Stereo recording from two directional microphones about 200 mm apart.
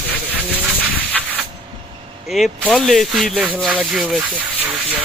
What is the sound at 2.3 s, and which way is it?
Speech, centre (ahead or behind).